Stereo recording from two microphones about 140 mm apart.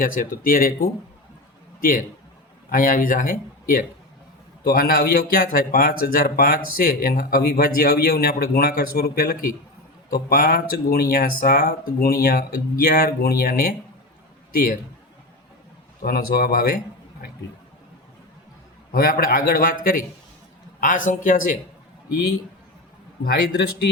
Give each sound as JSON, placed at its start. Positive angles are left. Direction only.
{"t": 0.0, "sound": "speech", "side_deg": 85}
{"t": 2.6, "sound": "speech", "side_deg": 80}
{"t": 16.0, "sound": "speech", "side_deg": 90}
{"t": 18.9, "sound": "speech", "side_deg": 90}
{"t": 20.8, "sound": "a man's voice", "side_deg": 70}